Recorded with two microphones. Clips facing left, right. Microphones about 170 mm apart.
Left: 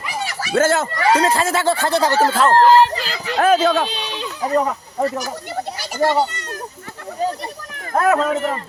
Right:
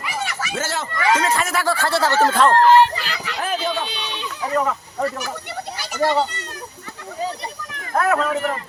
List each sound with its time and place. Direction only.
0.5 s speech: 50° left (ahead or behind)
0.9 s speech: 35° left (ahead or behind); by 2.2 s 15° left (ahead or behind)
2.3 s speech: 5° left (ahead or behind)
2.6 s speech: 35° left (ahead or behind)
3.3 s speech: 85° left
3.8 s speech: 35° left (ahead or behind)
7.9 s speech: 25° left (ahead or behind)